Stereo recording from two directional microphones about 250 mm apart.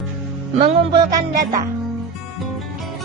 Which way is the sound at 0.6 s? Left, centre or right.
Right.